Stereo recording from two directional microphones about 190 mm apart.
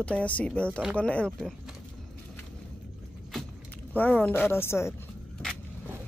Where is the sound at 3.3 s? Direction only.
10° left (ahead or behind).